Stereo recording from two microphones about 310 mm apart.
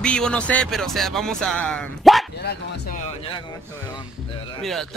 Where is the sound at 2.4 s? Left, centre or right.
Left.